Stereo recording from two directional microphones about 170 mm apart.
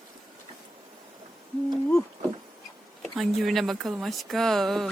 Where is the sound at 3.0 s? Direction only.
Centre (ahead or behind).